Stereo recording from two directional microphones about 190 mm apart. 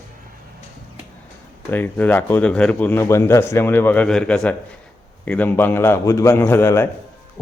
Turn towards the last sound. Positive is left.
turn(degrees=15)  # may be behind; listen again after turning